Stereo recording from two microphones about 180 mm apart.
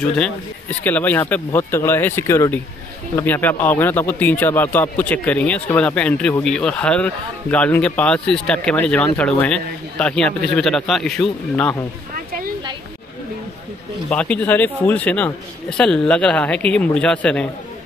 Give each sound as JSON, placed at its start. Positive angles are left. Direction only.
{"t": 0.0, "sound": "a man's voice", "side_deg": 5}
{"t": 14.0, "sound": "a man's voice", "side_deg": 5}